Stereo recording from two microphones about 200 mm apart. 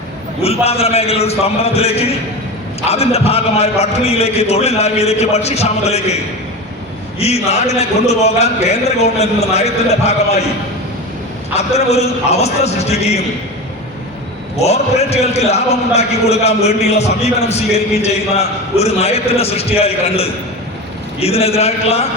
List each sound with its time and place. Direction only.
0.6 s a man's voice: 30° left (ahead or behind)
7.2 s a man's voice: 30° left (ahead or behind)
11.5 s a man's voice: 30° left (ahead or behind)
14.5 s a man's voice: 30° left (ahead or behind)